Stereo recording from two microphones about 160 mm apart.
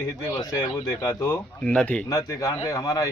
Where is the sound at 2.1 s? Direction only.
20° left (ahead or behind).